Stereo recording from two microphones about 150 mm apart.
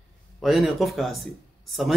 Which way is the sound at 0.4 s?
Centre (ahead or behind).